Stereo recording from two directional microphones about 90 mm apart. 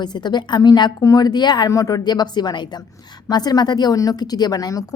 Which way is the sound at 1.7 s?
40° left (ahead or behind).